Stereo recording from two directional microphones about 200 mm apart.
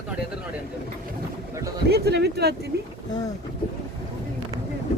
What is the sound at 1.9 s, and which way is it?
Speech, 55° right (ahead or behind).